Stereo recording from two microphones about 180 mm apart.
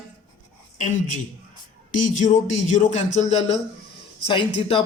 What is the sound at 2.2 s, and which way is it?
Speech, 45° left (ahead or behind).